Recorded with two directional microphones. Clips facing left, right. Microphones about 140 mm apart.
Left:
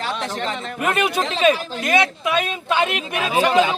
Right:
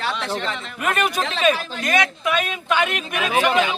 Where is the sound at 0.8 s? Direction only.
25° left (ahead or behind).